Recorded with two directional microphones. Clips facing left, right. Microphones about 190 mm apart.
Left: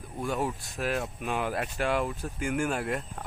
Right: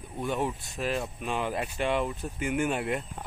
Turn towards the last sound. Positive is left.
turn(degrees=-5)  # may be behind; listen again after turning